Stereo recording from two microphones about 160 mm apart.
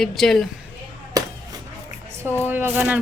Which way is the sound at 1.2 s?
20° right (ahead or behind).